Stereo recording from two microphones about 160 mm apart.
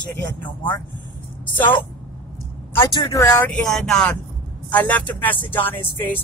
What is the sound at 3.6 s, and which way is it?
Speech, centre (ahead or behind).